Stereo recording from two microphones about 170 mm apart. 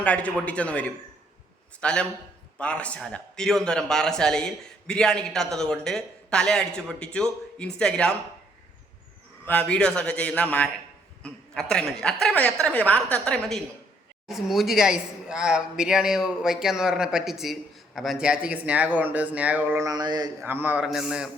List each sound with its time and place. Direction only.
0.0 s a woman's voice: 10° left (ahead or behind)
9.5 s a woman's voice: 10° left (ahead or behind); by 20.3 s 25° right (ahead or behind)
20.4 s a man's voice: 10° right (ahead or behind)